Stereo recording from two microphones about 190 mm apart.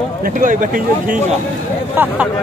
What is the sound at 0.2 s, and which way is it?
Speech, 45° right (ahead or behind).